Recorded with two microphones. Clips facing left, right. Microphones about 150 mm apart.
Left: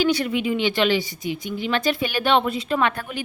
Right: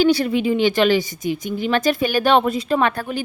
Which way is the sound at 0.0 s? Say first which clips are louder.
Right 4 dB; 35° right (ahead or behind).